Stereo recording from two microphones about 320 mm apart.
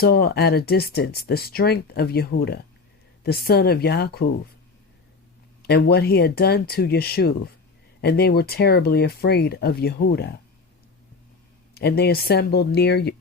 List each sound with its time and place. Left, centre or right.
0.0 s speech: left
5.6 s speech: left
11.7 s speech: left